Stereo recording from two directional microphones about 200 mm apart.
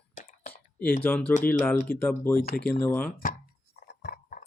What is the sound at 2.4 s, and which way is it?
Speech, 50° left (ahead or behind).